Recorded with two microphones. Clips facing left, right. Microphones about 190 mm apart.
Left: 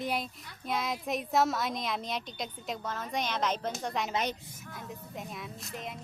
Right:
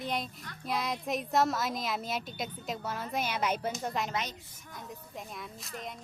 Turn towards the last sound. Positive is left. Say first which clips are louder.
# left 1 dB
turn(degrees=0)  # may be behind; listen again after turning